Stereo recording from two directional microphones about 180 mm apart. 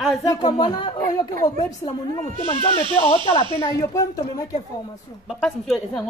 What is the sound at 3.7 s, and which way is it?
Speech, 20° left (ahead or behind).